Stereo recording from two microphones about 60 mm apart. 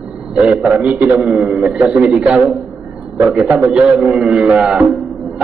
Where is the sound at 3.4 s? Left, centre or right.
Right.